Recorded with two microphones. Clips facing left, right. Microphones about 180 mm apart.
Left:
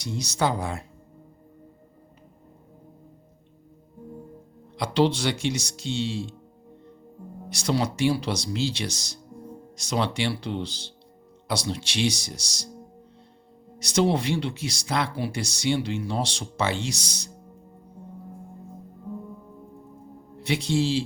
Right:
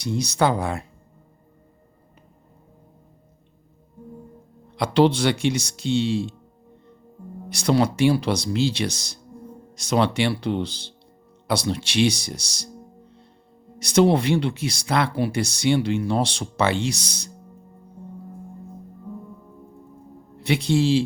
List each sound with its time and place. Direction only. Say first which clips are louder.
0.0 s speech: right 5 dB; 60° right (ahead or behind)
4.8 s speech: right 4 dB; 55° right (ahead or behind)
7.5 s speech: right 6 dB; 60° right (ahead or behind)
13.7 s speech: right 5 dB; 60° right (ahead or behind)
20.4 s speech: right 4 dB; 60° right (ahead or behind)